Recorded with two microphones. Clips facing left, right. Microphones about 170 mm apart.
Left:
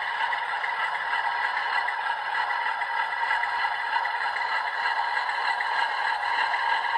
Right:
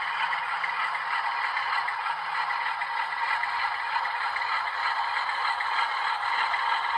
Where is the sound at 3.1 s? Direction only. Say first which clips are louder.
Left 2 dB; 50° left (ahead or behind).